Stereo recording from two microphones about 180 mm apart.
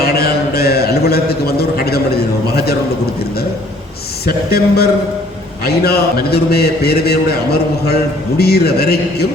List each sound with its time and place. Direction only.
0.0 s a sound: 60° left (ahead or behind)
4.3 s a man's voice: 60° left (ahead or behind)
8.4 s a man's voice: 60° left (ahead or behind)